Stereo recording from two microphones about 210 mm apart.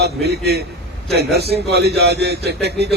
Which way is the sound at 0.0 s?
50° right (ahead or behind).